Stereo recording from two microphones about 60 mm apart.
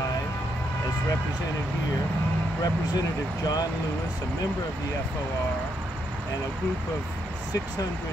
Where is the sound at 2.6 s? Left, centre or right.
Left.